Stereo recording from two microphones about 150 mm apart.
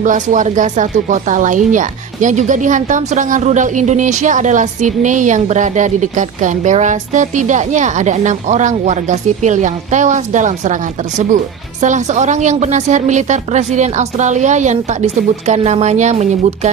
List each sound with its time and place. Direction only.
0.0 s a woman's voice: 60° right (ahead or behind)